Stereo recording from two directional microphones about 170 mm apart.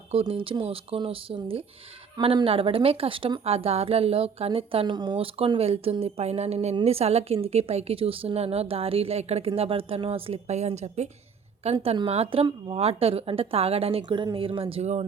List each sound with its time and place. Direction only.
0.1 s speech: 35° right (ahead or behind)